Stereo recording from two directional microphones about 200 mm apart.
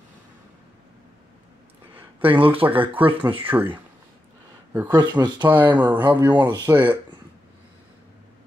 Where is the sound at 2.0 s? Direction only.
10° right (ahead or behind).